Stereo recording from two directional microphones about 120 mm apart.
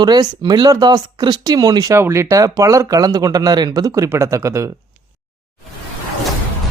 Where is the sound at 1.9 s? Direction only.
20° right (ahead or behind).